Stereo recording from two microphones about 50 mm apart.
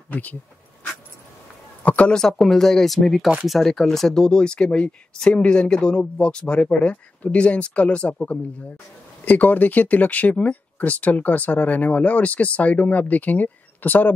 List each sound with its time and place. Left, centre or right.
0.1 s speech: left
1.8 s a sound: left
2.1 s speech: centre; by 8.2 s left
9.2 s speech: left